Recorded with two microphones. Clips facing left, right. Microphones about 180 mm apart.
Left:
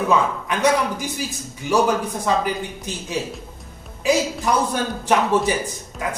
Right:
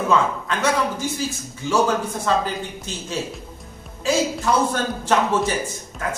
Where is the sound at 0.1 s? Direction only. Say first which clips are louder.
Right 1 dB; 15° left (ahead or behind).